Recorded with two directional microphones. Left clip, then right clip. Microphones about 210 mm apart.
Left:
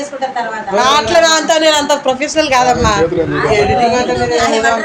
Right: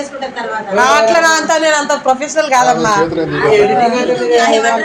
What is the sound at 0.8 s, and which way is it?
A man's voice, 10° left (ahead or behind).